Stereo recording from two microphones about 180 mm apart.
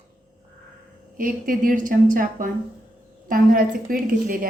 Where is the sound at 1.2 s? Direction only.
50° right (ahead or behind).